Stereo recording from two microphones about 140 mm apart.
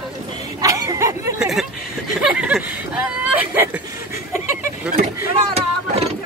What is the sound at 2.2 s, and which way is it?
Speech, 5° right (ahead or behind).